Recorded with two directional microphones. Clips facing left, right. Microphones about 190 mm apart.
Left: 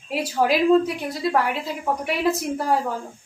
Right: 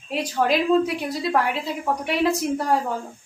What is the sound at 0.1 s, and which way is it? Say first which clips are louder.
A woman's voice: left 1 dB; 5° left (ahead or behind).